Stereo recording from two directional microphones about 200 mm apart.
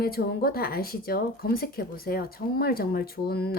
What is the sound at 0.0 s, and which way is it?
Speech, 50° left (ahead or behind).